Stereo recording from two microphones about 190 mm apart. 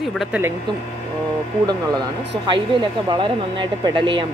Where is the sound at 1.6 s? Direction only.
20° right (ahead or behind).